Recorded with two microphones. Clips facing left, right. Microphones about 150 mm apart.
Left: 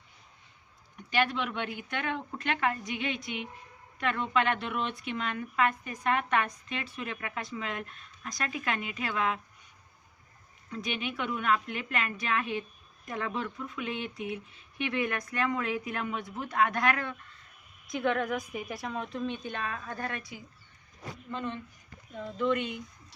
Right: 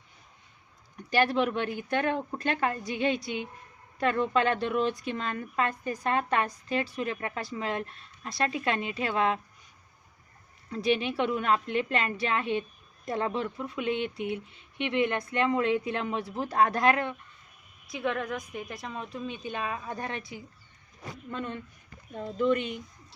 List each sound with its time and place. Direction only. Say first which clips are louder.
1.1 s a woman's voice: right 4 dB; 40° right (ahead or behind)
10.7 s a woman's voice: right 8 dB; 35° right (ahead or behind)
17.8 s a woman's voice: left 2 dB; centre (ahead or behind); by 20.3 s 25° right (ahead or behind)
22.4 s a woman's voice: right 3 dB; 35° right (ahead or behind)